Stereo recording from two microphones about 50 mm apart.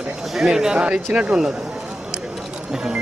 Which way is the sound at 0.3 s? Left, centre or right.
Centre.